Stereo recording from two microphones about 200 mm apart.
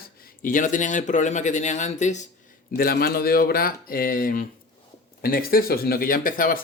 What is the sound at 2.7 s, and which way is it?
Speech, 50° left (ahead or behind).